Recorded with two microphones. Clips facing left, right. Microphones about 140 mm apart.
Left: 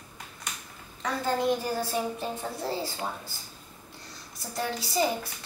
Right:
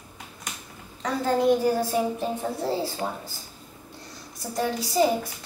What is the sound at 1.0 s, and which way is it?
A woman's voice, centre (ahead or behind).